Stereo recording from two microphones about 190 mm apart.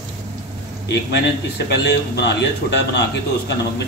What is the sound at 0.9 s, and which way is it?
A man's voice, 60° left (ahead or behind).